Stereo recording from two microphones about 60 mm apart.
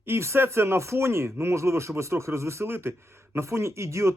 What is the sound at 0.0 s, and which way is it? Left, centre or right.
Speech, right.